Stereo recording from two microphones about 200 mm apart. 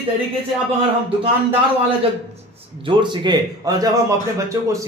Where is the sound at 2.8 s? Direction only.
25° right (ahead or behind).